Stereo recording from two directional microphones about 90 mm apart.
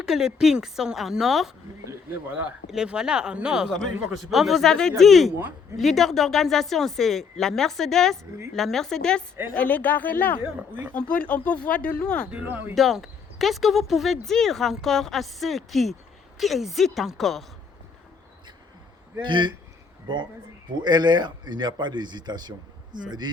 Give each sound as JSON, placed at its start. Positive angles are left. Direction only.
{"t": 0.0, "sound": "speech", "side_deg": -5}
{"t": 2.6, "sound": "speech", "side_deg": -5}
{"t": 10.4, "sound": "speech", "side_deg": -20}
{"t": 10.9, "sound": "speech", "side_deg": 15}
{"t": 12.3, "sound": "speech", "side_deg": -15}
{"t": 12.7, "sound": "speech", "side_deg": 0}
{"t": 19.2, "sound": "a man's voice", "side_deg": -60}
{"t": 20.8, "sound": "a man's voice", "side_deg": -55}